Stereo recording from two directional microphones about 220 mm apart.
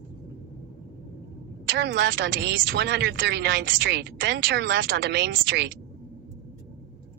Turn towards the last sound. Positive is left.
turn(degrees=-50)  # may be behind; listen again after turning